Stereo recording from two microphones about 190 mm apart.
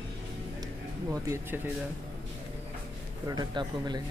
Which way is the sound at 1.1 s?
15° right (ahead or behind).